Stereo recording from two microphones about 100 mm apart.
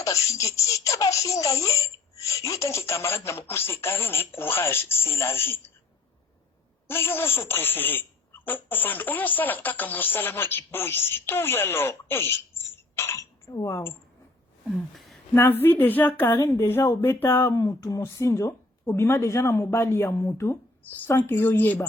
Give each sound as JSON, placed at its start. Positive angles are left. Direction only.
{"t": 0.0, "sound": "a woman's voice", "side_deg": 30}
{"t": 6.8, "sound": "speech", "side_deg": 20}
{"t": 14.9, "sound": "a sound", "side_deg": 0}
{"t": 15.6, "sound": "a woman's voice", "side_deg": 20}
{"t": 17.6, "sound": "a woman's voice", "side_deg": 35}